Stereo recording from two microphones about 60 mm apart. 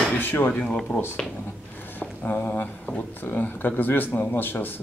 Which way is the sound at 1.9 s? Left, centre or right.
Left.